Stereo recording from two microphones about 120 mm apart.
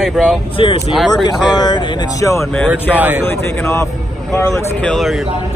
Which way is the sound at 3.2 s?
20° left (ahead or behind).